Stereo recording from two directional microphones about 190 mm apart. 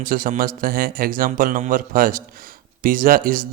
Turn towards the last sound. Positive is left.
turn(degrees=-45)  # may be behind; listen again after turning